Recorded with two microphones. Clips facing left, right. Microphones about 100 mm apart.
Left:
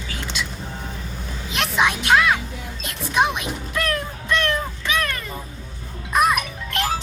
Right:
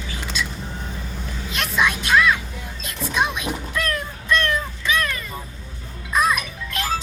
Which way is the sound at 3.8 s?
65° left (ahead or behind).